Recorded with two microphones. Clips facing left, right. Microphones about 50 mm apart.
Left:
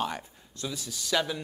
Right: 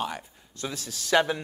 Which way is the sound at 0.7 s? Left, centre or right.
Right.